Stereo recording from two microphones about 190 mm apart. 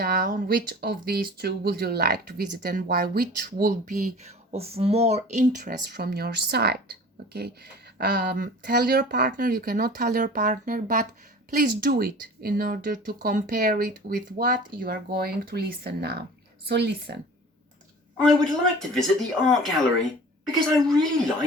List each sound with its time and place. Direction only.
0.0 s speech: 50° right (ahead or behind)
18.3 s speech: centre (ahead or behind)
20.7 s speech: centre (ahead or behind)